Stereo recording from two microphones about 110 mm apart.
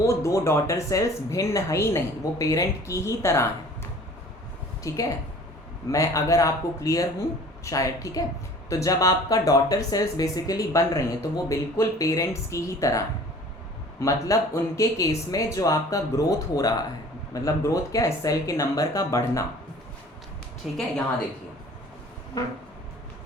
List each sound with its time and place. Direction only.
0.0 s speech: 30° left (ahead or behind)
4.8 s speech: 30° left (ahead or behind)
14.0 s speech: 30° left (ahead or behind)
20.6 s a woman's voice: 5° right (ahead or behind)